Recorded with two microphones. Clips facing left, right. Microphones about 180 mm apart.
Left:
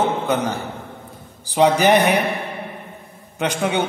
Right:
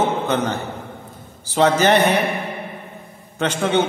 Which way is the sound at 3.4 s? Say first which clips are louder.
Right 2 dB; 15° left (ahead or behind).